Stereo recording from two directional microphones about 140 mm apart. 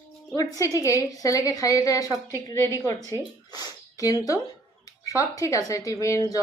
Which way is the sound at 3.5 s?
25° left (ahead or behind).